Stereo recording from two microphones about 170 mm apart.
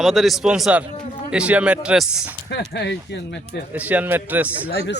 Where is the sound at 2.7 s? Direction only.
90° left.